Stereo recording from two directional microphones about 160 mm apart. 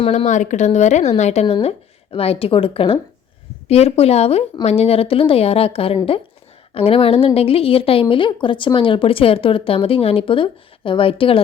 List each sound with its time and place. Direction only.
0.0 s a woman's voice: 40° left (ahead or behind)